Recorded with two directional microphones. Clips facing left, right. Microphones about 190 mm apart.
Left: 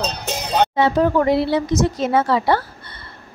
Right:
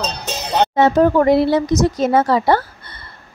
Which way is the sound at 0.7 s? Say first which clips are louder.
Right 5 dB; 45° right (ahead or behind).